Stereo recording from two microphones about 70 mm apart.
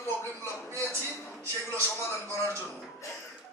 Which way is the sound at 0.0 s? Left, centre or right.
Left.